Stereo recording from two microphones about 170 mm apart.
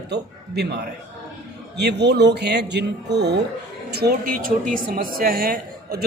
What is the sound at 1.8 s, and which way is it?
A man's voice, 80° right.